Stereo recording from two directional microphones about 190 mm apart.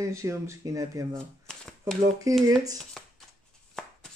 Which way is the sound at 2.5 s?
20° right (ahead or behind).